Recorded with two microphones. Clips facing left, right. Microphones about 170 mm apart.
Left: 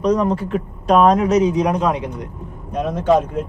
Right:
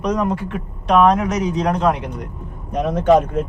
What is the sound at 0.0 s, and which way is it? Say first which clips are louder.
Speech: left 3 dB; 35° left (ahead or behind).